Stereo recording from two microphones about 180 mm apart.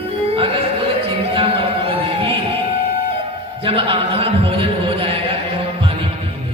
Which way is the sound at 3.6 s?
30° right (ahead or behind).